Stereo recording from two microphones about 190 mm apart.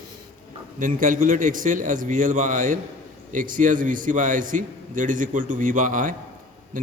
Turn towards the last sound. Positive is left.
turn(degrees=-45)  # may be behind; listen again after turning